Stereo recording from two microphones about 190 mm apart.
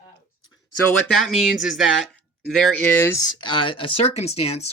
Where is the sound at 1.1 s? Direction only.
Centre (ahead or behind).